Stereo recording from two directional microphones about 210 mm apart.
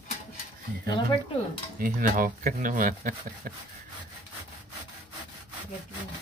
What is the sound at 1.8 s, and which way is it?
Speech, 40° right (ahead or behind).